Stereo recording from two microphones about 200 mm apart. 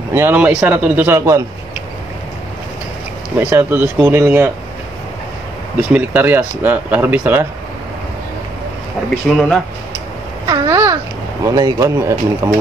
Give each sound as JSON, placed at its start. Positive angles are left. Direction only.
{"t": 0.1, "sound": "speech", "side_deg": -10}
{"t": 3.3, "sound": "speech", "side_deg": -10}
{"t": 5.8, "sound": "speech", "side_deg": -10}
{"t": 9.3, "sound": "speech", "side_deg": 0}
{"t": 10.4, "sound": "babbling", "side_deg": -20}
{"t": 11.4, "sound": "speech", "side_deg": -15}